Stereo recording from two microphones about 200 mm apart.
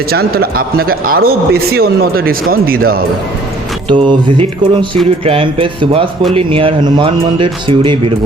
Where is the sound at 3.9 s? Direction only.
25° right (ahead or behind).